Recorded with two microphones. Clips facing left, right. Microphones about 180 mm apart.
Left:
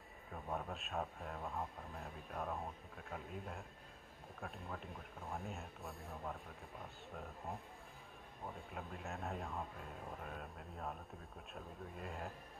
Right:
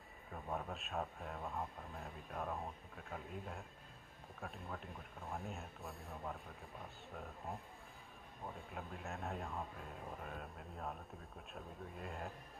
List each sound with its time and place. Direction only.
0.3 s speech: centre (ahead or behind)